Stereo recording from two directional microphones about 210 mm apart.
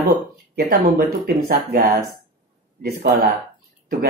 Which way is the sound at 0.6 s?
45° right (ahead or behind).